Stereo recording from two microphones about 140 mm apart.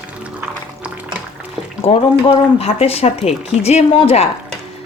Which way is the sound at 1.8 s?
45° left (ahead or behind).